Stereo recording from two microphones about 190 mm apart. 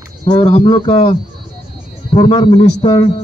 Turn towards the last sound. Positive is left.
turn(degrees=25)  # may be behind; listen again after turning